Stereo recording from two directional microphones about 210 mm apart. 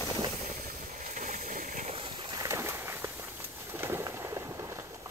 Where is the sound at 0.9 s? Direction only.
40° right (ahead or behind).